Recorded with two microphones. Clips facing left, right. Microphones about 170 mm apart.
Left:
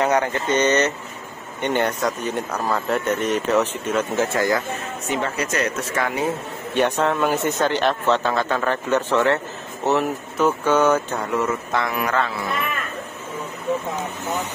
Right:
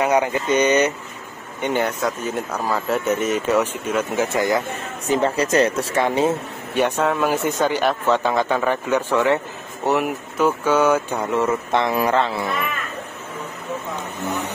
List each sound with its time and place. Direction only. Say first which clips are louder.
0.0 s speech: right 1 dB; 10° right (ahead or behind)
5.0 s speech: right 6 dB; 35° right (ahead or behind)
6.7 s speech: even; 5° right (ahead or behind); by 12.5 s 25° right (ahead or behind)